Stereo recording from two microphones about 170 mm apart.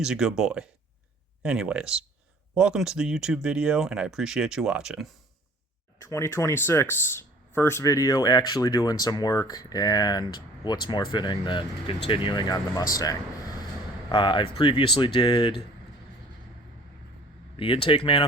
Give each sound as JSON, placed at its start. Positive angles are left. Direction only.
{"t": 0.0, "sound": "speech", "side_deg": -5}
{"t": 6.1, "sound": "speech", "side_deg": 15}
{"t": 17.8, "sound": "speech", "side_deg": 30}